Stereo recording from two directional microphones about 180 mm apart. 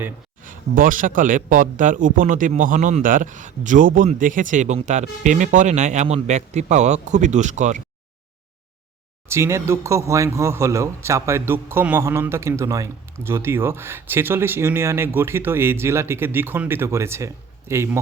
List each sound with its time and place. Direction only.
0.4 s a man's voice: 50° right (ahead or behind)
9.3 s speech: 15° right (ahead or behind)